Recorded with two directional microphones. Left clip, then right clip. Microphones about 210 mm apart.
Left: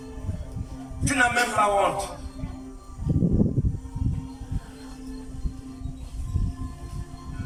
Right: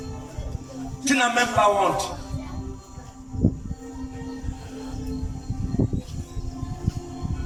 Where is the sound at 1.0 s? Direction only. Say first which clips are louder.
Right 1 dB; 20° right (ahead or behind).